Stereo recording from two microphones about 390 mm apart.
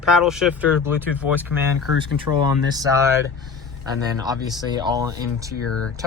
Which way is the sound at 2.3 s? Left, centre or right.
Left.